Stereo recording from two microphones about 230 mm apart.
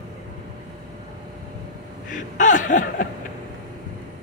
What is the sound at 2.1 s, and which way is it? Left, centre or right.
Chuckle, left.